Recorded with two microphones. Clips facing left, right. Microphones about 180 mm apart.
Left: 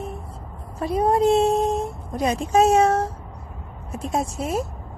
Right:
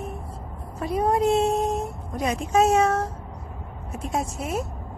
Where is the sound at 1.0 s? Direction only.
30° left (ahead or behind).